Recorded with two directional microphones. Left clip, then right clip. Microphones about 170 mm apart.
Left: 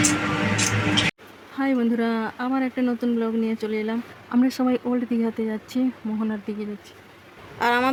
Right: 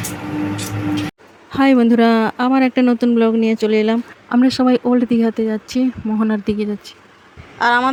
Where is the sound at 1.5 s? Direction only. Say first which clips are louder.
Right 10 dB; 45° right (ahead or behind).